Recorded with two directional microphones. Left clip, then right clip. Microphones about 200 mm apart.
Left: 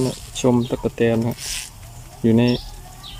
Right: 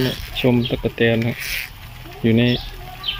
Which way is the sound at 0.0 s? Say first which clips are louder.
Right 1 dB; 5° left (ahead or behind).